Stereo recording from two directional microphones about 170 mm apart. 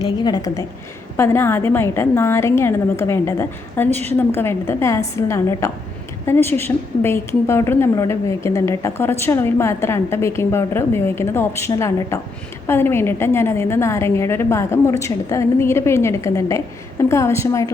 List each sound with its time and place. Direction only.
0.0 s a woman's voice: 20° left (ahead or behind)